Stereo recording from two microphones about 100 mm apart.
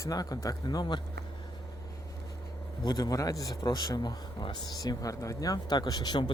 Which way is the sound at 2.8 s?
40° left (ahead or behind).